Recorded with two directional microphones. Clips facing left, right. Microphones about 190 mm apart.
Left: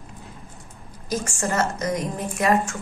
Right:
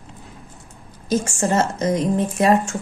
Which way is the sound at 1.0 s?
25° right (ahead or behind).